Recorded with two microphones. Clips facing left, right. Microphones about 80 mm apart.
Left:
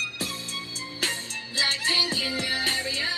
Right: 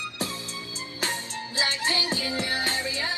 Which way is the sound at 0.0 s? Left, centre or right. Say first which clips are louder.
Right 2 dB; right.